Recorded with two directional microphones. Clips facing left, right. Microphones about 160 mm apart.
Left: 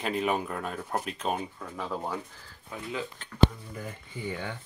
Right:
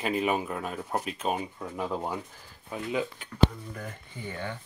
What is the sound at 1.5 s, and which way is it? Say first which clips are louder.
Speech: right 3 dB; 15° right (ahead or behind).